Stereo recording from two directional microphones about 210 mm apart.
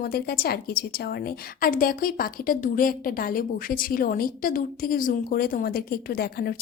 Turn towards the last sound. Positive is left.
turn(degrees=45)  # may be behind; listen again after turning